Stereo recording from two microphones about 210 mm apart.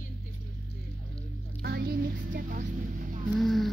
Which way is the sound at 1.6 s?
45° right (ahead or behind).